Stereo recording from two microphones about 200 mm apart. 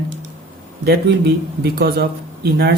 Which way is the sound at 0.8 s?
55° right (ahead or behind).